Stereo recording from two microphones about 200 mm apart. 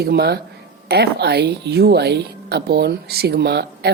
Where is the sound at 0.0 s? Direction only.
50° right (ahead or behind).